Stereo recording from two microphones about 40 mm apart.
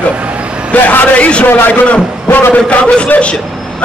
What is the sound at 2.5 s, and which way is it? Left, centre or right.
Speech, left.